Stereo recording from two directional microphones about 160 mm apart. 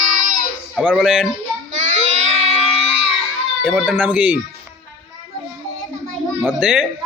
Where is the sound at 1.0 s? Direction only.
5° right (ahead or behind).